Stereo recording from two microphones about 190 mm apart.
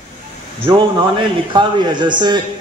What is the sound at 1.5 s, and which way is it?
Speech, 25° right (ahead or behind).